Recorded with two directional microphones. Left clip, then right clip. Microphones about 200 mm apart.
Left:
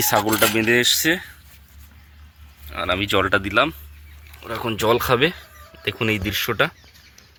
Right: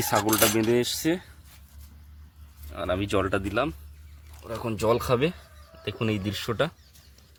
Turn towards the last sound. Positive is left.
turn(degrees=0)  # may be behind; listen again after turning